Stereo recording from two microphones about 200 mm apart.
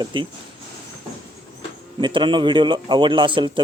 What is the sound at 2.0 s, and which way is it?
A man's voice, 25° right (ahead or behind).